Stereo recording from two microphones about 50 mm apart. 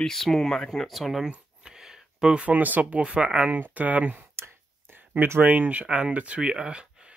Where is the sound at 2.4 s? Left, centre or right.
Right.